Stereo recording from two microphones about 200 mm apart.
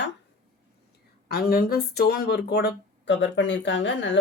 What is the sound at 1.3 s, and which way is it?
Speech, 50° left (ahead or behind).